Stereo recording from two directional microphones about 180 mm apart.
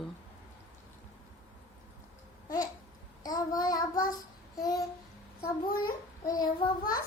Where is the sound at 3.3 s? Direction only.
20° left (ahead or behind).